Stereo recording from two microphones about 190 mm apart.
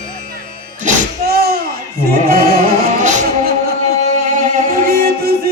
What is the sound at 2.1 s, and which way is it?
Chant, 50° right (ahead or behind).